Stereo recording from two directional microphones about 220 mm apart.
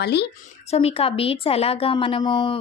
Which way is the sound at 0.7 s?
25° left (ahead or behind).